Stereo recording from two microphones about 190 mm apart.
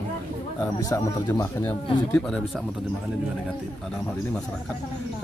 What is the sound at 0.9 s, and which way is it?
Speech, 15° left (ahead or behind).